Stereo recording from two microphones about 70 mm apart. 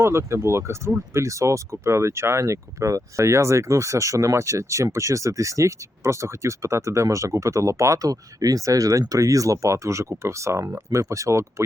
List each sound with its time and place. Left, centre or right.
0.0 s speech: right